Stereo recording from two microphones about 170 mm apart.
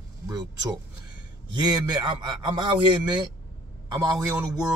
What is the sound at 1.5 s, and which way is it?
A man's voice, 25° right (ahead or behind).